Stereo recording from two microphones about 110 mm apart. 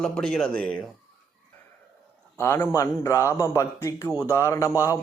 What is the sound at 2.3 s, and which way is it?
A man's voice, 25° left (ahead or behind).